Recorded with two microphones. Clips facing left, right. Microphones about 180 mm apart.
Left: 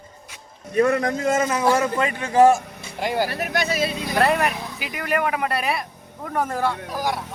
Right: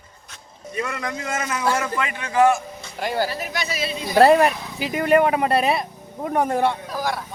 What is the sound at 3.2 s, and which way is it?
Speech, 60° left (ahead or behind).